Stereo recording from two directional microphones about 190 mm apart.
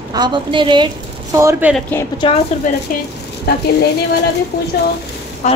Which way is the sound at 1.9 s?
10° left (ahead or behind).